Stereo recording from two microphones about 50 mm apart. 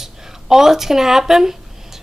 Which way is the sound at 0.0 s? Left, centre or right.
Centre.